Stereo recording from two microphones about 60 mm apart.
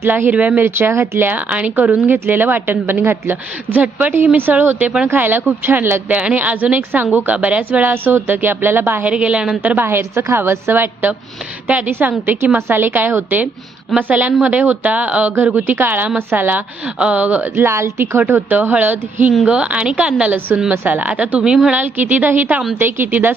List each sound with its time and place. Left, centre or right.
0.0 s speech: right
0.6 s speech: right
1.3 s speech: right
2.0 s a woman's voice: right
7.3 s a woman's voice: right
9.0 s speech: centre
9.8 s a woman's voice: right
12.2 s a woman's voice: right
16.8 s speech: centre
17.5 s speech: right
18.4 s speech: right
20.8 s a woman's voice: right
21.1 s speech: centre
21.8 s a woman's voice: right